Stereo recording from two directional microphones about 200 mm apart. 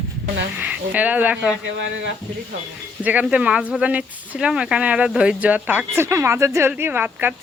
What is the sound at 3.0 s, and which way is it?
Speech, 5° right (ahead or behind).